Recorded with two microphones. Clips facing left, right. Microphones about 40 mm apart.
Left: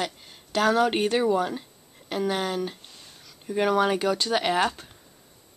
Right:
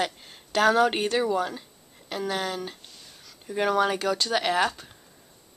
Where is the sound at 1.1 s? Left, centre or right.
Centre.